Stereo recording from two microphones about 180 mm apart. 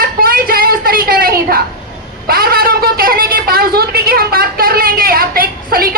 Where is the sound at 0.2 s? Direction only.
55° right (ahead or behind).